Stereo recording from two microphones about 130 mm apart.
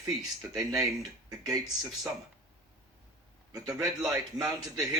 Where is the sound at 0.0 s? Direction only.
30° right (ahead or behind).